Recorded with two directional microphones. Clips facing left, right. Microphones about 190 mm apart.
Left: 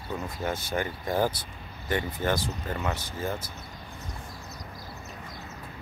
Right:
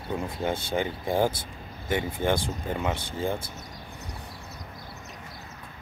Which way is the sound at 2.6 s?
15° right (ahead or behind).